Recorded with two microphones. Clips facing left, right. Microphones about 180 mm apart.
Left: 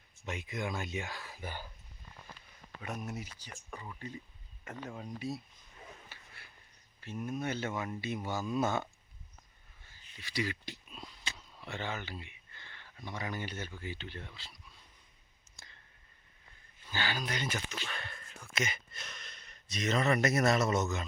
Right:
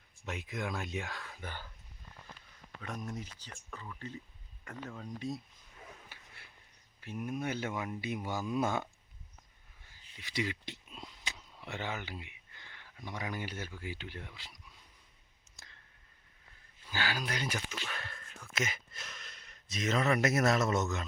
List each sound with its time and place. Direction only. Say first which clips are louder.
0.3 s speech: left 1 dB; centre (ahead or behind)
2.8 s speech: left 1 dB; 10° left (ahead or behind)
6.1 s dog: left 1 dB; 20° right (ahead or behind)
7.0 s speech: even; 10° right (ahead or behind)
9.8 s a sound: left 1 dB; 15° right (ahead or behind)
15.5 s clicking: left 1 dB; centre (ahead or behind)
16.8 s speech: even; 5° right (ahead or behind)